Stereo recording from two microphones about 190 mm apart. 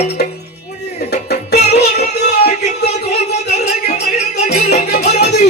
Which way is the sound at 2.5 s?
35° left (ahead or behind).